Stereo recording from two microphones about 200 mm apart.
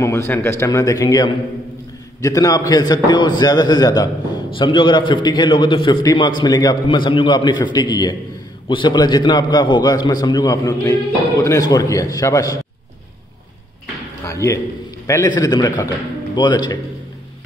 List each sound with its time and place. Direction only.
0.0 s a man's voice: 10° left (ahead or behind)
14.2 s a man's voice: 15° left (ahead or behind)